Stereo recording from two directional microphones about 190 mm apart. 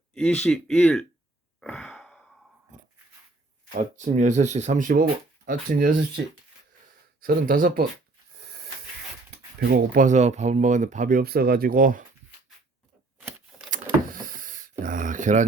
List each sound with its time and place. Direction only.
0.1 s speech: 5° left (ahead or behind)
1.6 s sigh: 5° left (ahead or behind)
3.8 s speech: 40° right (ahead or behind)
7.2 s speech: 50° right (ahead or behind)
9.6 s speech: 65° right (ahead or behind)
10.0 s speech: 40° right (ahead or behind)
13.7 s power windows: 45° right (ahead or behind)